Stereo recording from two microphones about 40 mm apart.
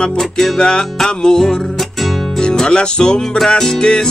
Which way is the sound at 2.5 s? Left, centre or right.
Left.